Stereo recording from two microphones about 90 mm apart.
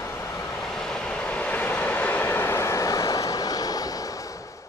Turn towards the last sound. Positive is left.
turn(degrees=45)  # may be behind; listen again after turning